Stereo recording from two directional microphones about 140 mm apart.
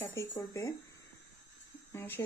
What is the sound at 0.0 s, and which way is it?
Speech, 20° left (ahead or behind).